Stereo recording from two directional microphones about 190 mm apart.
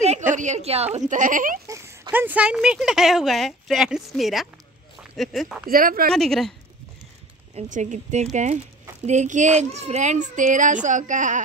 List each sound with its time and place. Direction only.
0.3 s a child's voice: 40° right (ahead or behind)
1.7 s speech: 15° right (ahead or behind); by 5.6 s centre (ahead or behind)
5.7 s speech: 50° right (ahead or behind)
6.1 s speech: centre (ahead or behind)
7.5 s a child's voice: 40° right (ahead or behind)